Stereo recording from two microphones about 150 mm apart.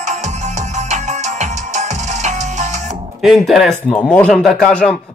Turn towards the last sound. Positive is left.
turn(degrees=5)  # may be behind; listen again after turning